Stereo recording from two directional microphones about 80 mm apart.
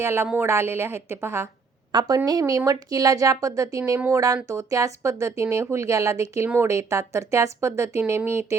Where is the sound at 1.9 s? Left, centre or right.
Right.